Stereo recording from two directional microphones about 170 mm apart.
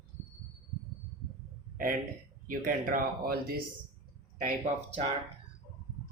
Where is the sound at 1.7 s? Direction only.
55° right (ahead or behind).